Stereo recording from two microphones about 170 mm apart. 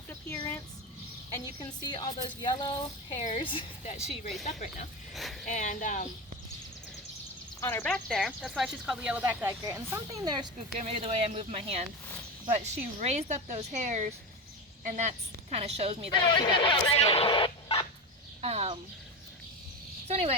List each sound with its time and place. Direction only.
0.3 s a sound: 15° left (ahead or behind)
1.5 s a woman's voice: 25° left (ahead or behind)
3.2 s a woman's voice: 35° left (ahead or behind)
3.8 s speech: 45° left (ahead or behind)
5.1 s speech: centre (ahead or behind)
5.5 s speech: 45° left (ahead or behind)
7.6 s speech: 15° left (ahead or behind); by 10.5 s 25° right (ahead or behind)
10.8 s a woman's voice: 35° right (ahead or behind)
16.2 s speech: 25° left (ahead or behind)
18.4 s a woman's voice: 35° right (ahead or behind)
20.1 s speech: 35° right (ahead or behind)